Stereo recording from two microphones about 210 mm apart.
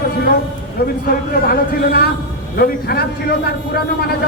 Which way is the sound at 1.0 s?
45° left (ahead or behind).